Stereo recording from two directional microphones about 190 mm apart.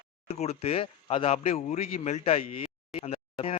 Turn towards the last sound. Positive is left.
turn(degrees=30)  # may be behind; listen again after turning